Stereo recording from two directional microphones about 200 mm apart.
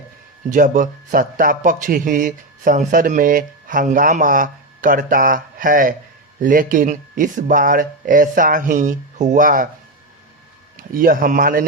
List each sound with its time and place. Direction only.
0.5 s a man's voice: 40° right (ahead or behind)
10.8 s a man's voice: 45° right (ahead or behind)